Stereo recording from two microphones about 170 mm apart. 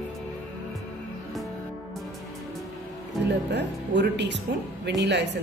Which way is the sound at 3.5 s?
90° right.